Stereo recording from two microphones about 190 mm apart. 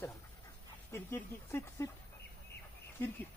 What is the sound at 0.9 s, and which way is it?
Speech, 15° left (ahead or behind).